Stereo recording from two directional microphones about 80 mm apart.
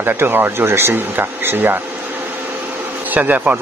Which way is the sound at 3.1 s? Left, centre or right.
Right.